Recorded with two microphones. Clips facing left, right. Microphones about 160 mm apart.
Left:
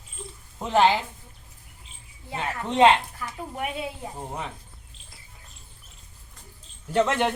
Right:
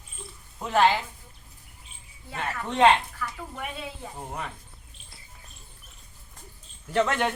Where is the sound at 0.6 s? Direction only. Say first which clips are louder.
Left 2 dB; 20° left (ahead or behind).